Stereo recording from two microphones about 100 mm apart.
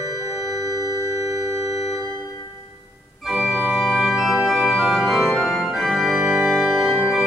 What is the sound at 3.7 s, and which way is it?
Organ, 5° right (ahead or behind).